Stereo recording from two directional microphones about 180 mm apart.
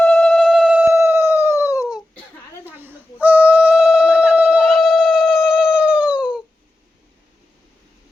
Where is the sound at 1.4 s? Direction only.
15° left (ahead or behind).